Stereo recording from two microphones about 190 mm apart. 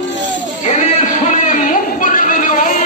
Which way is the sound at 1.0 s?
40° left (ahead or behind).